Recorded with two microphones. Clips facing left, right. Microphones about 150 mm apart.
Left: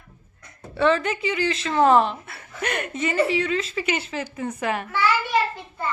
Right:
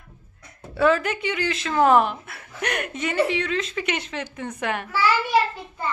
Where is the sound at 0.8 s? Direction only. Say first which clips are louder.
Even; 5° right (ahead or behind).